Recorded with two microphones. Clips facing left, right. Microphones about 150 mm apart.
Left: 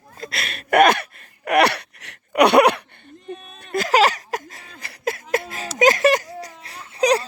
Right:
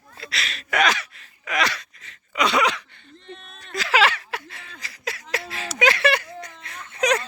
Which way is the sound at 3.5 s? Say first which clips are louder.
Left 4 dB; 55° left (ahead or behind).